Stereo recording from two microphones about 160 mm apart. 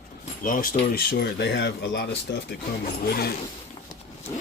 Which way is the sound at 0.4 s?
60° left (ahead or behind).